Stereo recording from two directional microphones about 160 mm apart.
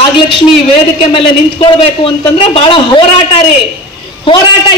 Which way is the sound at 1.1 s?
35° left (ahead or behind).